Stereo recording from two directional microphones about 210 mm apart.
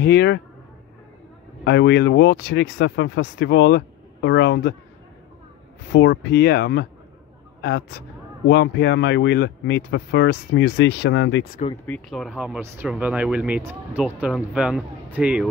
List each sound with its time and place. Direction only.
0.0 s speech: 50° left (ahead or behind)
1.6 s speech: 55° left (ahead or behind)
5.9 s speech: 55° left (ahead or behind)
11.7 s speech: 10° left (ahead or behind)